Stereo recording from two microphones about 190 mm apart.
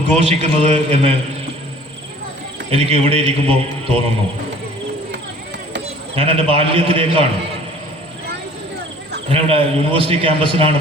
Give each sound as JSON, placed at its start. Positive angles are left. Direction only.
{"t": 0.2, "sound": "a man's voice", "side_deg": -35}
{"t": 2.6, "sound": "a man's voice", "side_deg": -30}
{"t": 5.8, "sound": "a man's voice", "side_deg": -30}
{"t": 9.3, "sound": "a man's voice", "side_deg": -30}